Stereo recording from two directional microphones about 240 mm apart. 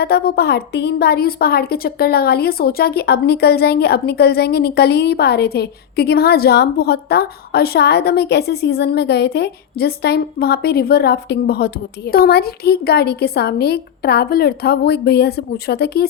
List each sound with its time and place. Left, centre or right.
0.0 s a woman's voice: left